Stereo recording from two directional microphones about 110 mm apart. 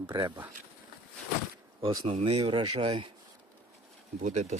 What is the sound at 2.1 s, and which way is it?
Speech, 65° right (ahead or behind).